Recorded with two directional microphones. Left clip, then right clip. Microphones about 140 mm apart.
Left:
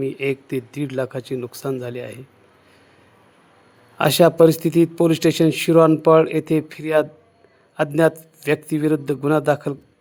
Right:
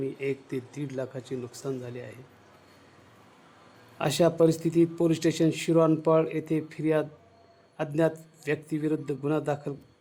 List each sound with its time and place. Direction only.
0.0 s a man's voice: 35° left (ahead or behind)
4.2 s a man's voice: 40° left (ahead or behind)